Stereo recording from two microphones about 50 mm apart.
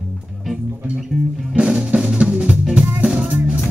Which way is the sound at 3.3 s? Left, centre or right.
Right.